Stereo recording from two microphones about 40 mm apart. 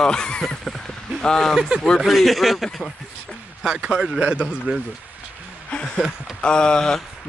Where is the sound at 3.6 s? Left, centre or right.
Right.